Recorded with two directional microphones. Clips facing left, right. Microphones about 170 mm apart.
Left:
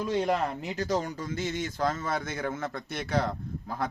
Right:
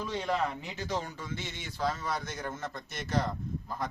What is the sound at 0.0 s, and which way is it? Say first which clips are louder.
Speech: left 4 dB; 45° left (ahead or behind).